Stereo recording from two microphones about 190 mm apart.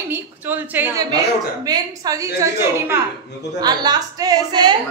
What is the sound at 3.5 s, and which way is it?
A woman's voice, 20° right (ahead or behind).